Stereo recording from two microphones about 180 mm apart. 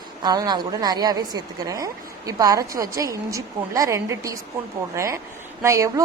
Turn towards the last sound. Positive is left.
turn(degrees=-15)  # may be behind; listen again after turning